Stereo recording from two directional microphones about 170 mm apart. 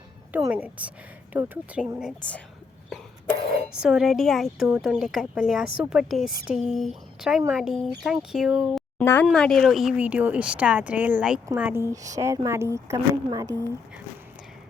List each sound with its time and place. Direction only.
0.3 s speech: 10° right (ahead or behind)